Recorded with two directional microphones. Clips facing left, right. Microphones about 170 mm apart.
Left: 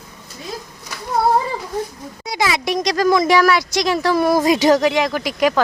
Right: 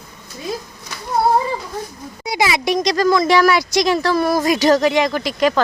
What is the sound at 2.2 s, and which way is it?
Speech, 10° right (ahead or behind).